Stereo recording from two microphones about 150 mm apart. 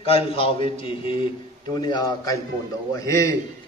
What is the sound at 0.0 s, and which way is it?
A man's voice, 40° left (ahead or behind).